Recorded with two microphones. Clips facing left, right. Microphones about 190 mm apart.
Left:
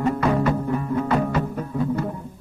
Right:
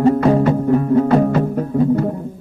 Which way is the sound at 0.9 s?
40° right (ahead or behind).